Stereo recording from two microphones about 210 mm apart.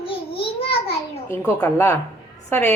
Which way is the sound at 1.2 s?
10° left (ahead or behind).